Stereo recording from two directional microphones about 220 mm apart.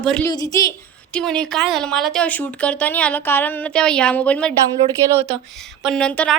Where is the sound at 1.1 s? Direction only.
5° left (ahead or behind).